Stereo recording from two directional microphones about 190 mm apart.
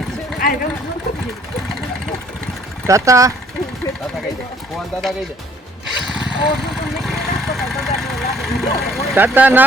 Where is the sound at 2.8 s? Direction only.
15° right (ahead or behind).